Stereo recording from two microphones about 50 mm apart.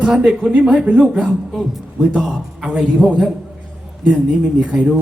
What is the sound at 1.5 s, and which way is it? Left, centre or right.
Speech, centre.